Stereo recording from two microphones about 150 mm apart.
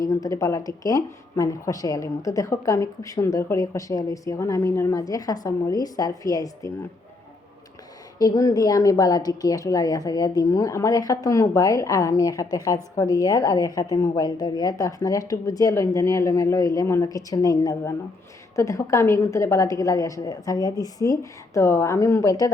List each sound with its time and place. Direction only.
0.0 s a woman's voice: 20° left (ahead or behind)
8.2 s a woman's voice: 25° left (ahead or behind)